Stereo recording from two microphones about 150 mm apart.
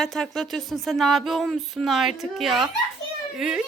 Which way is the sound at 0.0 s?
5° left (ahead or behind).